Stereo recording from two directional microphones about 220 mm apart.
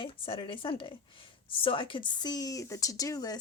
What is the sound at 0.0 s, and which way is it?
Speech, 25° left (ahead or behind).